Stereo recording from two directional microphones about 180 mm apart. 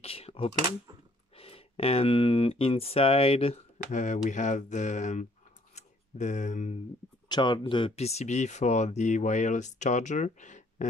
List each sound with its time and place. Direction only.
0.0 s a sound: 35° left (ahead or behind)
1.3 s speech: 35° left (ahead or behind)
7.2 s speech: 25° left (ahead or behind); by 10.9 s 45° left (ahead or behind)